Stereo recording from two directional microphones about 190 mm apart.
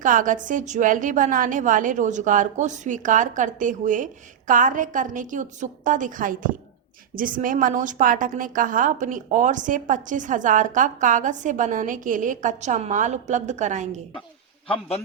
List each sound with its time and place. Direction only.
0.0 s a woman's voice: 45° right (ahead or behind)
14.7 s a man's voice: 30° left (ahead or behind)